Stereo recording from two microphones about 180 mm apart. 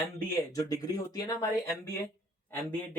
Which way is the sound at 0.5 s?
20° left (ahead or behind).